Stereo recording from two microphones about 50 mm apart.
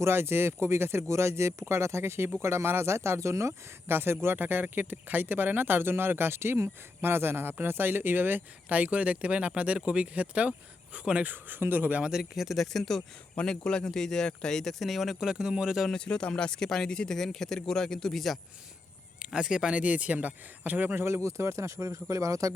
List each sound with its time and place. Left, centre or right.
0.0 s speech: right
3.8 s speech: right
8.7 s speech: right
11.3 s speech: right
12.0 s speech: centre
13.3 s speech: centre
15.2 s speech: centre
15.9 s speech: centre
19.2 s speech: centre; by 21.0 s right
21.0 s speech: right